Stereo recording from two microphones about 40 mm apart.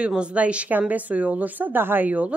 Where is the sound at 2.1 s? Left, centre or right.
Right.